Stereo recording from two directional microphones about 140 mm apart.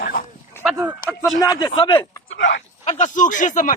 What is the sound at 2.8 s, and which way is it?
Speech, 60° left (ahead or behind).